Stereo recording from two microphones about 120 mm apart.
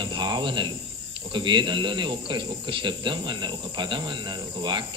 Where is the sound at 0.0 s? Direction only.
40° right (ahead or behind).